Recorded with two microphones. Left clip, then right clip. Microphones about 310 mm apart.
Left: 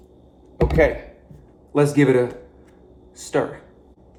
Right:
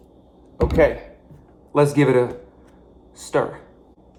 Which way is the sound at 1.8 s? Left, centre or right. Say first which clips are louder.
Even; centre.